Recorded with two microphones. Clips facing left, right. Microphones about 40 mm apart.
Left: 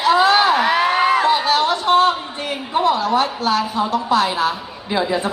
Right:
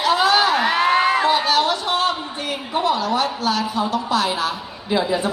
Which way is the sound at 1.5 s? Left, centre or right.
Left.